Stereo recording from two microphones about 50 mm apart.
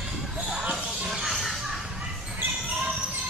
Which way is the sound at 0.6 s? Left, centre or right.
Right.